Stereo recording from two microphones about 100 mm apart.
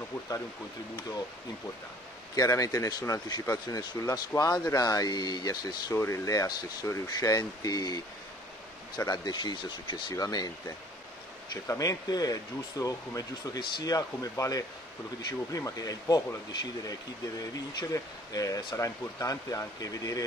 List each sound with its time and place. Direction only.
2.3 s speech: 35° left (ahead or behind); by 10.1 s 55° left (ahead or behind)
10.1 s speech: 40° left (ahead or behind)
11.5 s speech: 30° left (ahead or behind)
17.4 s speech: 35° left (ahead or behind)